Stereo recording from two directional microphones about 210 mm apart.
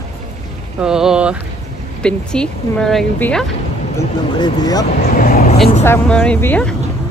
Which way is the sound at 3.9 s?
20° left (ahead or behind).